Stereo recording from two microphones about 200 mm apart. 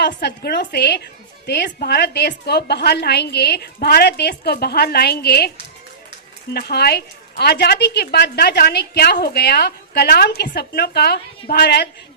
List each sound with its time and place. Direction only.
0.0 s a woman's voice: 55° left (ahead or behind)
6.5 s speech: 50° left (ahead or behind)